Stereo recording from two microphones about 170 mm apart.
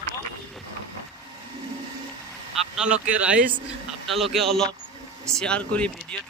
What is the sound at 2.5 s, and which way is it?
Speech, 5° right (ahead or behind).